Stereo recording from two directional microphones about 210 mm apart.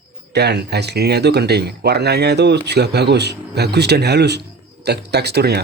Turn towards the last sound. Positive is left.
turn(degrees=-50)  # may be behind; listen again after turning